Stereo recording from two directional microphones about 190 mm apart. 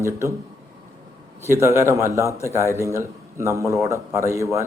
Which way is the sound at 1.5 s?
15° right (ahead or behind).